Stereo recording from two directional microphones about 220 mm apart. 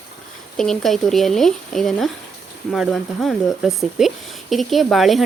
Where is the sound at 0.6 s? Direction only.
Centre (ahead or behind).